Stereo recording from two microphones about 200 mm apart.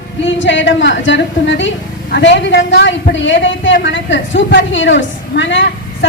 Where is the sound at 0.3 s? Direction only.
65° left (ahead or behind).